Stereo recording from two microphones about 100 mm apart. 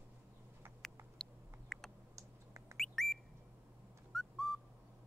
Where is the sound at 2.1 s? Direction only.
30° right (ahead or behind).